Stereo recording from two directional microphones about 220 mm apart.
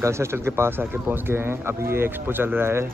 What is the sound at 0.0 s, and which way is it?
Speech, 10° right (ahead or behind).